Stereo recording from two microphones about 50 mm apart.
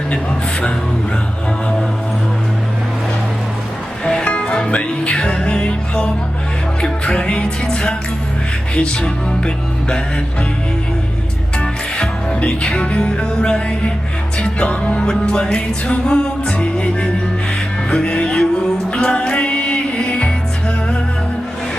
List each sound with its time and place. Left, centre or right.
4.0 s music: centre
11.6 s music: left